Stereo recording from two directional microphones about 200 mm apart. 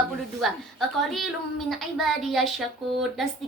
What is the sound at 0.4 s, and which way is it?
A woman's voice, centre (ahead or behind).